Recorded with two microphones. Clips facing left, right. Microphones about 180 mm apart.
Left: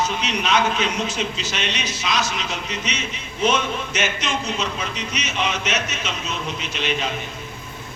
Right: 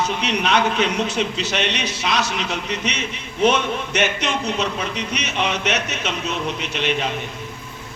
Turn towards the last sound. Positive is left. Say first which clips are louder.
# right 2 dB
turn(degrees=-60)  # may be behind; listen again after turning